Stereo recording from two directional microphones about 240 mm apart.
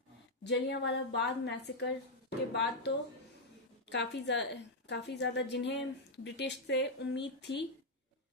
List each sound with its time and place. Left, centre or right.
0.4 s a woman's voice: left
3.9 s a woman's voice: left